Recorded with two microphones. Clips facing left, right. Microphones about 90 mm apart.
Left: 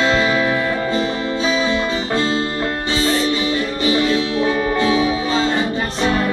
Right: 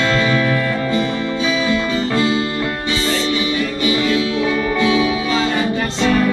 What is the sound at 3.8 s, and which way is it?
Music, 30° left (ahead or behind).